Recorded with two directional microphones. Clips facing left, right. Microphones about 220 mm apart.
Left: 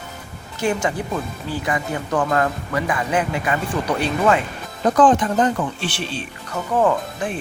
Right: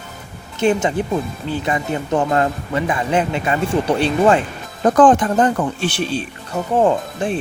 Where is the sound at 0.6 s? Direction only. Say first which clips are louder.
Right 5 dB; 25° right (ahead or behind).